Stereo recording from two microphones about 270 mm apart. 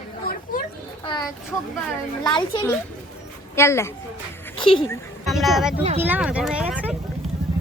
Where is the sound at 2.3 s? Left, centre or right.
Centre.